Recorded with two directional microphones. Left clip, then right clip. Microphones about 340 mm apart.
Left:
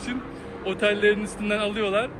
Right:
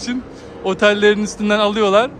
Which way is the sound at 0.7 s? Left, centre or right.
Centre.